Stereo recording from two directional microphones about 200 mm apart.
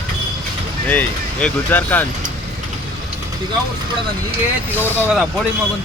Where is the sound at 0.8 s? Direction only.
5° left (ahead or behind).